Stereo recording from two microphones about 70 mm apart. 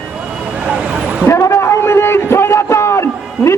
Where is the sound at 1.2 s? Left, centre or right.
Left.